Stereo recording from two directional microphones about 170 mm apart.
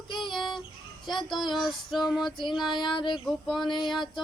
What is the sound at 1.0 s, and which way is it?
Speech, 25° left (ahead or behind).